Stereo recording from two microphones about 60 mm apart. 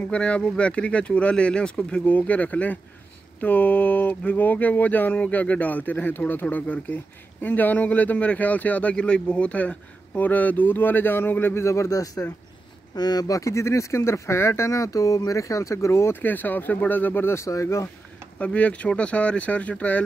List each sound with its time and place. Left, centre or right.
0.0 s speech: left
11.5 s speech: left
16.2 s speech: left
18.4 s speech: left